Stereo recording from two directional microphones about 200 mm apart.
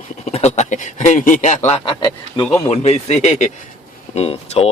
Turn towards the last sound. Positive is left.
turn(degrees=30)  # may be behind; listen again after turning